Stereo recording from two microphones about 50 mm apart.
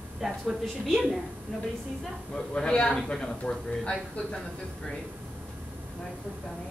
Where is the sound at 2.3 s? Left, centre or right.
Centre.